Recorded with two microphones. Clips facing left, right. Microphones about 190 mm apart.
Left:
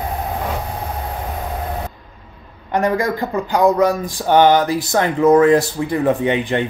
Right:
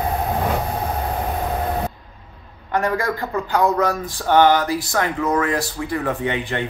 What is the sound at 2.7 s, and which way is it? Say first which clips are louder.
Speech: left 3 dB; 20° left (ahead or behind).